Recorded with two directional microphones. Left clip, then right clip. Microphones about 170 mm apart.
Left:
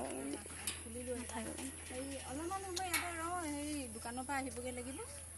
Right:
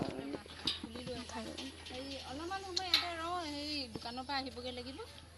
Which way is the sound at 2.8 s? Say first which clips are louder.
Right 7 dB; 5° right (ahead or behind).